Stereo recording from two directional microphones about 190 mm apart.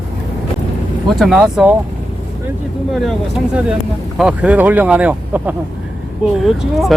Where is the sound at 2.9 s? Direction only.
Centre (ahead or behind).